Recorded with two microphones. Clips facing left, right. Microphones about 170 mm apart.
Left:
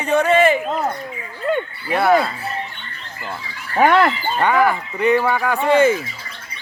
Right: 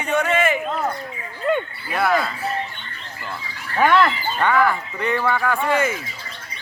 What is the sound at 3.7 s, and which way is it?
Speech, 40° left (ahead or behind).